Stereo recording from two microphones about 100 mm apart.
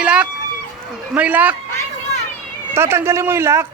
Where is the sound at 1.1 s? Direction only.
15° right (ahead or behind).